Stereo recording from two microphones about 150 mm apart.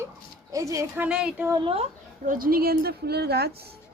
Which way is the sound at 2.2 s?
70° right (ahead or behind).